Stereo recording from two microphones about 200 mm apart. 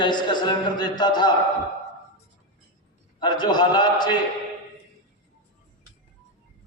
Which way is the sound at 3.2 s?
20° left (ahead or behind).